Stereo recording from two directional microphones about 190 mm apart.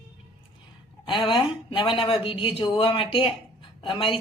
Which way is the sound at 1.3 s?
25° left (ahead or behind).